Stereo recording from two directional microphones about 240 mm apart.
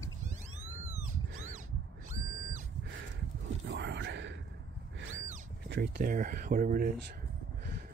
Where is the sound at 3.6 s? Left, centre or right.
Right.